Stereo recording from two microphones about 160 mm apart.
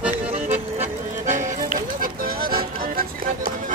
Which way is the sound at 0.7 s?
50° right (ahead or behind).